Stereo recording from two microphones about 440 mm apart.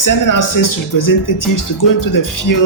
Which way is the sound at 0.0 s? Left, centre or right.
Left.